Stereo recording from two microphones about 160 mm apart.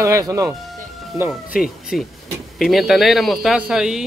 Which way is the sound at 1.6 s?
Centre (ahead or behind).